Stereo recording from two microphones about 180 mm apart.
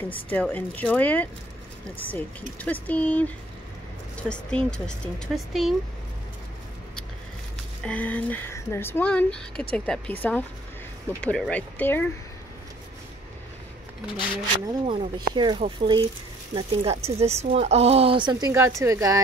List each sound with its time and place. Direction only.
0.1 s speech: 10° left (ahead or behind)
7.8 s speech: 10° left (ahead or behind)
14.7 s speech: 25° right (ahead or behind)